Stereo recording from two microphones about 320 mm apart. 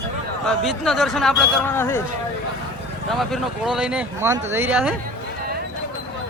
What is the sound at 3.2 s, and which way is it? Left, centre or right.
Speech, centre.